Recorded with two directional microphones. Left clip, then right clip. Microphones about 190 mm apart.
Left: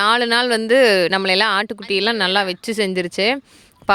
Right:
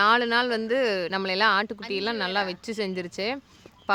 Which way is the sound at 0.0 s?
55° left (ahead or behind).